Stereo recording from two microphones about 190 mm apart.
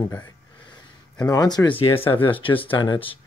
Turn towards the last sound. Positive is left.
turn(degrees=25)  # may be behind; listen again after turning